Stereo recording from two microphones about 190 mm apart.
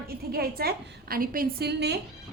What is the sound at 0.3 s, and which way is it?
A woman's voice, 55° right (ahead or behind).